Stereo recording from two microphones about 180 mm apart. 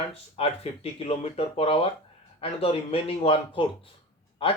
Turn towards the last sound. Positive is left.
turn(degrees=30)  # may be behind; listen again after turning